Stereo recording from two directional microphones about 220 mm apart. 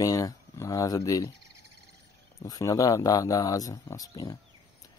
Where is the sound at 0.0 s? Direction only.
15° left (ahead or behind).